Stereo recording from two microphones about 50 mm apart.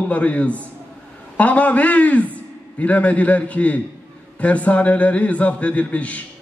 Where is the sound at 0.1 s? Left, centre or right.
Left.